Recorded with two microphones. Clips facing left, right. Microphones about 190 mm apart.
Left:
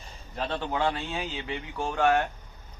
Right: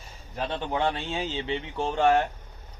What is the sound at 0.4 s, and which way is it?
A man's voice, 15° right (ahead or behind).